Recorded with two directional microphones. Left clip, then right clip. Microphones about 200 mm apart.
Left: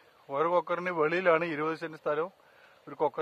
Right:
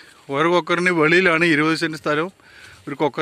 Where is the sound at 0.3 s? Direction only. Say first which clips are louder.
Right 9 dB; 10° right (ahead or behind).